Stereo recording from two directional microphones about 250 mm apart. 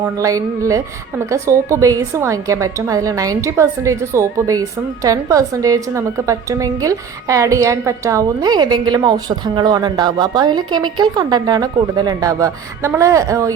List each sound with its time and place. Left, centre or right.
0.0 s a woman's voice: centre